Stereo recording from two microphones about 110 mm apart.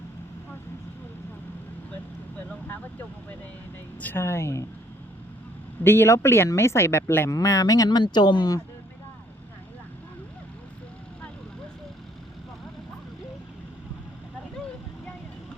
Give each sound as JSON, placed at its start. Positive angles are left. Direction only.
{"t": 2.5, "sound": "vehicle", "side_deg": 15}
{"t": 4.0, "sound": "speech", "side_deg": 20}
{"t": 5.8, "sound": "speech", "side_deg": 20}